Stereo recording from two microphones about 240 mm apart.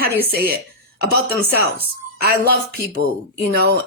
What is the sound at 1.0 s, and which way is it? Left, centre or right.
Speech, right.